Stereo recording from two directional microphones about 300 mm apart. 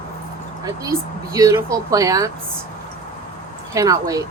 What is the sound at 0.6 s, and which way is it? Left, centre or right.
Speech, centre.